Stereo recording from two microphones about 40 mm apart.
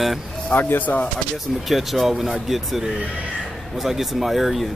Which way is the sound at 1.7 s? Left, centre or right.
Centre.